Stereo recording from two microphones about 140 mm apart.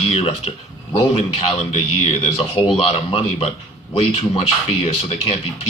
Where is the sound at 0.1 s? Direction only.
45° left (ahead or behind).